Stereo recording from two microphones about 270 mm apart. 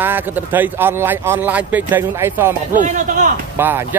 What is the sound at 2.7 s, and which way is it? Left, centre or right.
Speech, right.